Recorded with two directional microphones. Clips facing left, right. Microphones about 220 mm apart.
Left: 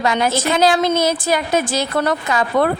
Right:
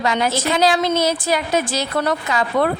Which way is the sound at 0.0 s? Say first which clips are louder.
Left 2 dB; 50° left (ahead or behind).